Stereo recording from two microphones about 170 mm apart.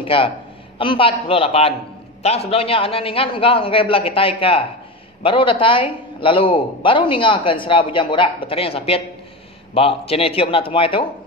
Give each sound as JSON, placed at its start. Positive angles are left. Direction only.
{"t": 0.0, "sound": "a man's voice", "side_deg": 30}